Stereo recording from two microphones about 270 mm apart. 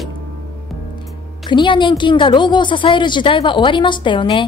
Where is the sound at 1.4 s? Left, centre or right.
Centre.